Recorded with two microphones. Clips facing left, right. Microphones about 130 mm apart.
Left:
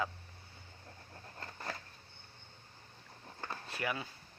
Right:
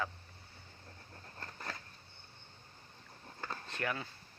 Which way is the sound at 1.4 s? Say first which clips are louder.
Left 2 dB; 20° left (ahead or behind).